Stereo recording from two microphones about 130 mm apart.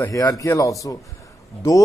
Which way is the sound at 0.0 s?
25° left (ahead or behind).